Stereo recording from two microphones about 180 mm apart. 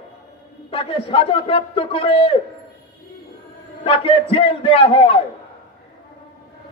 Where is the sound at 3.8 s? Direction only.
30° left (ahead or behind).